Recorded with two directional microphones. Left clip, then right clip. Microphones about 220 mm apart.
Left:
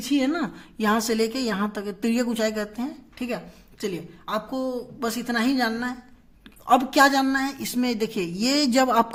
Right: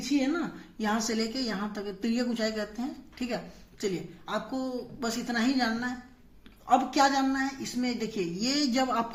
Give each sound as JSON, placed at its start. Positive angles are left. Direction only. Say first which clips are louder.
{"t": 0.2, "sound": "a woman's voice", "louder": "left 5 dB", "side_deg": 40}